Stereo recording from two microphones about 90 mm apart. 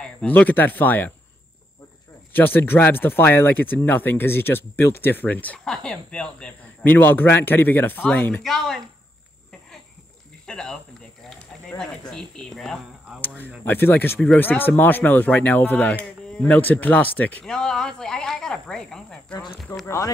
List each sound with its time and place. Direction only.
0.0 s speech: 15° left (ahead or behind)
2.3 s speech: 20° left (ahead or behind)
8.4 s speech: 5° left (ahead or behind)
10.4 s speech: 10° left (ahead or behind)
13.7 s speech: 25° left (ahead or behind)
17.5 s speech: 5° left (ahead or behind)
19.7 s speech: 35° left (ahead or behind)